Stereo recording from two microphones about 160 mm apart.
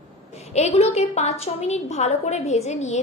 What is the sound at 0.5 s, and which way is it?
A woman's voice, 40° left (ahead or behind).